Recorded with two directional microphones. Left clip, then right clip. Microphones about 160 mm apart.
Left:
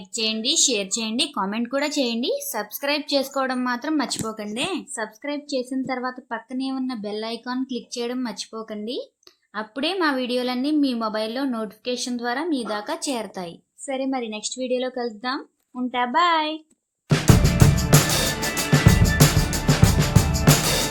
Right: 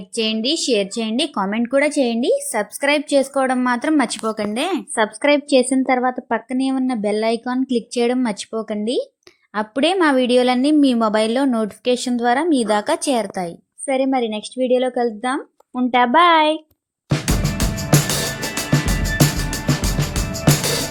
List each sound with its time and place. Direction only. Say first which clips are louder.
0.2 s a woman's voice: right 2 dB; 40° right (ahead or behind)
4.9 s a woman's voice: right 13 dB; 55° right (ahead or behind); by 16.6 s 40° right (ahead or behind)
17.3 s music: left 2 dB; centre (ahead or behind)